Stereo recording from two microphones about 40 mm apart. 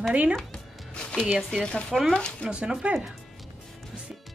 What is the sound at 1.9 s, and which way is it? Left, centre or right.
Speech, centre.